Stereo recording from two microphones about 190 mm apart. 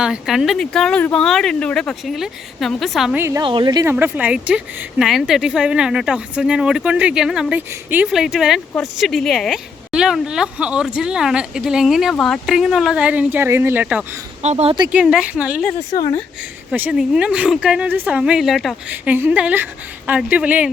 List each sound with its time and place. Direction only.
0.0 s speech: 5° right (ahead or behind)
3.2 s speech: 15° right (ahead or behind)
3.4 s a woman's voice: 25° right (ahead or behind)
3.9 s speech: 10° right (ahead or behind)
14.4 s speech: 35° right (ahead or behind)
14.9 s speech: 5° right (ahead or behind)
16.7 s speech: 5° right (ahead or behind)